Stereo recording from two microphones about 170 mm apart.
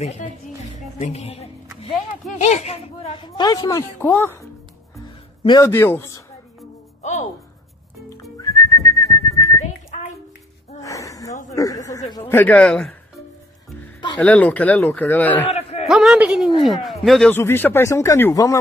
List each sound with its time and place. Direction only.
0.0 s speech: 40° left (ahead or behind)
0.7 s music: 45° left (ahead or behind)
2.4 s speech: 40° left (ahead or behind)
3.1 s speech: 25° left (ahead or behind)
5.6 s speech: 15° left (ahead or behind)
7.0 s music: 40° left (ahead or behind)
8.2 s whistling: 20° left (ahead or behind)
10.8 s gasp: 20° left (ahead or behind)
11.5 s a sound: 20° left (ahead or behind)
12.3 s speech: 10° left (ahead or behind)
14.2 s speech: 10° left (ahead or behind)
15.4 s a sound: 40° left (ahead or behind)
15.9 s a woman's voice: centre (ahead or behind)
17.3 s speech: 10° left (ahead or behind)